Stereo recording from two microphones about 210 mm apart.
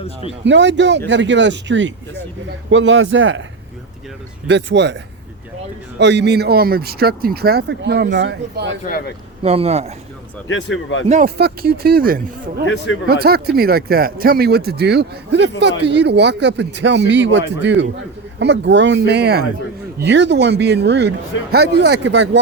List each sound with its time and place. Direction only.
0.4 s speech: 60° right (ahead or behind)
4.4 s speech: 55° right (ahead or behind)
6.0 s speech: 55° right (ahead or behind)
9.4 s speech: 30° right (ahead or behind)
11.3 s speech: 50° right (ahead or behind)
12.6 s a man's voice: 60° left (ahead or behind)
13.1 s speech: 50° right (ahead or behind)